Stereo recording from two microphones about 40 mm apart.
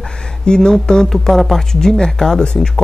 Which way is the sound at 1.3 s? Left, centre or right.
Centre.